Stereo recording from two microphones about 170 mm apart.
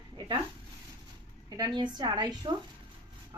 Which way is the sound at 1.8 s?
25° right (ahead or behind).